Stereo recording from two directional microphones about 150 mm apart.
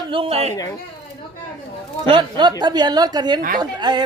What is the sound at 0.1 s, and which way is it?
Speech, 40° right (ahead or behind).